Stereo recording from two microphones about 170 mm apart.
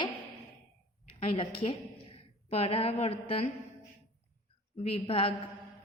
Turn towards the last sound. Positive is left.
turn(degrees=35)  # may be behind; listen again after turning